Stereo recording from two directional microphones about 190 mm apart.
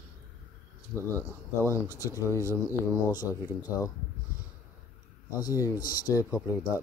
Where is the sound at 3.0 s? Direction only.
20° left (ahead or behind).